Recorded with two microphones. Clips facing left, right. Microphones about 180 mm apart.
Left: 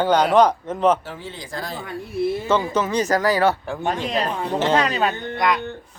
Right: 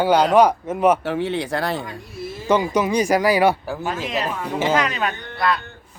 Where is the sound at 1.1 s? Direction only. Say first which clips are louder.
Right 11 dB; 70° right (ahead or behind).